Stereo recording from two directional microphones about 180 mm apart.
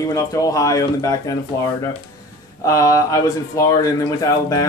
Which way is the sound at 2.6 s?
15° left (ahead or behind).